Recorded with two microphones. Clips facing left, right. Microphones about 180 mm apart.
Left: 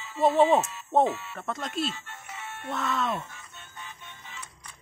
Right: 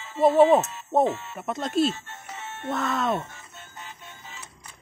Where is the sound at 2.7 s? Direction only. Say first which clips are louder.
Right 3 dB; 45° right (ahead or behind).